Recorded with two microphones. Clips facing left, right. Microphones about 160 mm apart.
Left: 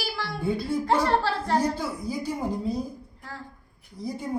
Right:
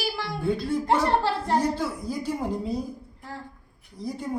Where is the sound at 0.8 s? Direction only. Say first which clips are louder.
Right 1 dB; 20° right (ahead or behind).